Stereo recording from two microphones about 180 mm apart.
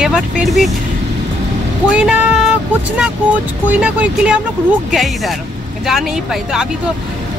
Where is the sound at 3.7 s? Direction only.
5° right (ahead or behind).